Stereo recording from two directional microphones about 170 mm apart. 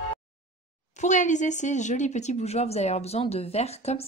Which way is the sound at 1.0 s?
45° left (ahead or behind).